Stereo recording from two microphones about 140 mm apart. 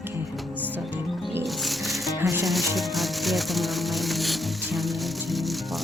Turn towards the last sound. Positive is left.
turn(degrees=0)  # may be behind; listen again after turning